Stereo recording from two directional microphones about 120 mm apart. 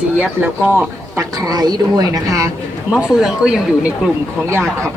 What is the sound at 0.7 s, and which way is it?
Speech, 20° right (ahead or behind).